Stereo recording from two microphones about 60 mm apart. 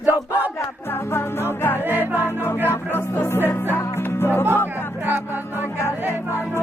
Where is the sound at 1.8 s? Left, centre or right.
Right.